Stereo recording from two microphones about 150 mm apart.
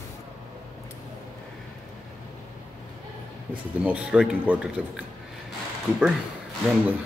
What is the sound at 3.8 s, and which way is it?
Speech, 10° right (ahead or behind).